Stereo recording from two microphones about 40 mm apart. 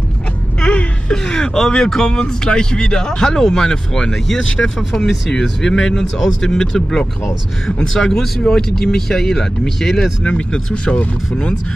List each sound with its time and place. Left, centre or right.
0.6 s whimper: left
1.1 s speech: centre
4.1 s speech: centre
10.2 s speech: left